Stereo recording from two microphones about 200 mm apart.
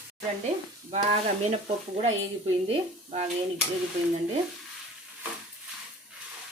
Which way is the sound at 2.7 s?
30° right (ahead or behind).